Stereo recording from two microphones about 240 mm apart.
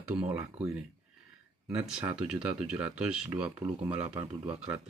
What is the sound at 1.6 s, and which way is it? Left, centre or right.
Speech, centre.